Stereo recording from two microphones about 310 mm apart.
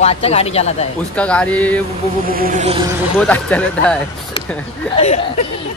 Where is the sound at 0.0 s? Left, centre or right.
Centre.